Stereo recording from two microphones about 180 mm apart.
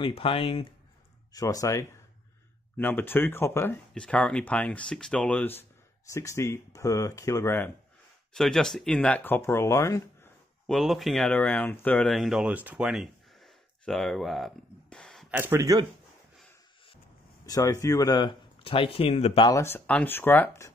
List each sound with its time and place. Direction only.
0.0 s speech: 30° left (ahead or behind)
1.3 s speech: 20° left (ahead or behind)
8.3 s speech: 5° left (ahead or behind)
10.7 s speech: centre (ahead or behind)
15.3 s speech: 10° right (ahead or behind)
17.5 s speech: 20° left (ahead or behind)
19.5 s speech: 15° left (ahead or behind)